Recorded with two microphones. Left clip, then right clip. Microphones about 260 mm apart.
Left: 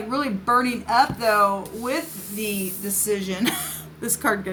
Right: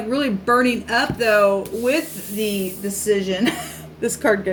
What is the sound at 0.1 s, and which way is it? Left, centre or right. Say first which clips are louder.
A woman's voice: right 2 dB; centre.